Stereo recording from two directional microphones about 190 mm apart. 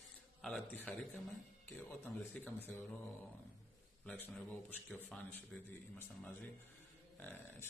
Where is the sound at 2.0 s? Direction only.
10° left (ahead or behind).